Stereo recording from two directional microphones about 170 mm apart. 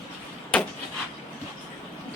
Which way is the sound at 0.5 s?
5° left (ahead or behind).